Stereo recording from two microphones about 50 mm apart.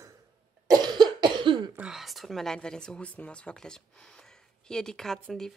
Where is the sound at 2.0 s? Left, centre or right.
Centre.